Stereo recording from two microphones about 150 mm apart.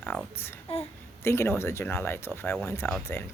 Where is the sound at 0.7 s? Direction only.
40° left (ahead or behind).